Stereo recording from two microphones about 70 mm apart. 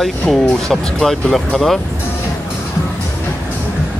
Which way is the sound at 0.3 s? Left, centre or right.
Centre.